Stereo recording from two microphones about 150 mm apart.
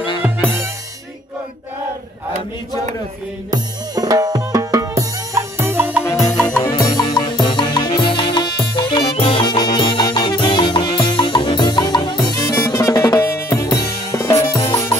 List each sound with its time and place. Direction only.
0.2 s music: 15° right (ahead or behind)
3.4 s drum: 25° right (ahead or behind)
6.8 s music: 25° left (ahead or behind)